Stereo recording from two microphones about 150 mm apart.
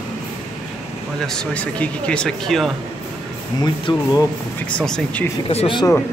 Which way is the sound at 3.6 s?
25° left (ahead or behind).